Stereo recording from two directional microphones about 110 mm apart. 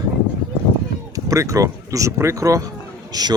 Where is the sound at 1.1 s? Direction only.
30° right (ahead or behind).